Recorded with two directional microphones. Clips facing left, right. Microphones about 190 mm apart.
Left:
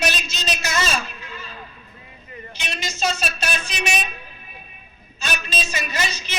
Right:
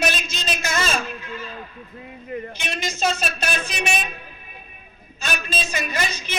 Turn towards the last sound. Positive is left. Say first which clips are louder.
# right 1 dB
turn(degrees=-55)  # may be behind; listen again after turning